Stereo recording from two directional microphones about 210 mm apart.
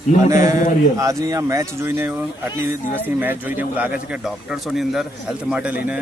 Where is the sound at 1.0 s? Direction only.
15° right (ahead or behind).